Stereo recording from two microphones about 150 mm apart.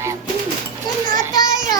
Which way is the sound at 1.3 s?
25° left (ahead or behind).